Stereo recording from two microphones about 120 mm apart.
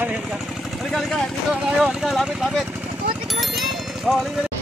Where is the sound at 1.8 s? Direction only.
Centre (ahead or behind).